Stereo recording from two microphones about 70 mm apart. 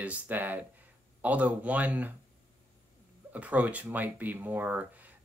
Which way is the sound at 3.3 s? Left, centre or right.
Right.